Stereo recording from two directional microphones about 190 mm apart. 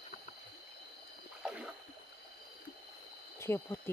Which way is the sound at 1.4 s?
5° right (ahead or behind).